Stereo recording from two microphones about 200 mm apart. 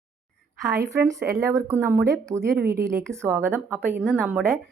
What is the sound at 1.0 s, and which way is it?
Speech, 15° right (ahead or behind).